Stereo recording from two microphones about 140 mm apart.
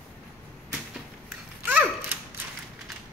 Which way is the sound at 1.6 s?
15° right (ahead or behind).